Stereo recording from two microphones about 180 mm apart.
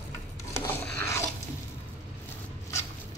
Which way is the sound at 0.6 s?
10° left (ahead or behind).